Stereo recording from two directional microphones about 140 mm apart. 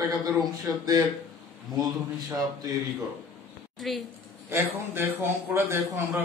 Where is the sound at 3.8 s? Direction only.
Centre (ahead or behind).